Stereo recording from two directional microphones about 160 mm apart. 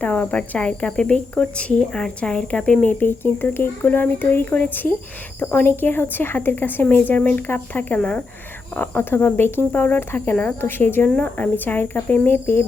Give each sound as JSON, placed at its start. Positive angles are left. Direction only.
{"t": 0.0, "sound": "speech", "side_deg": 10}